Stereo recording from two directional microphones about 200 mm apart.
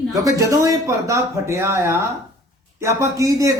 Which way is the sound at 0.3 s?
15° right (ahead or behind).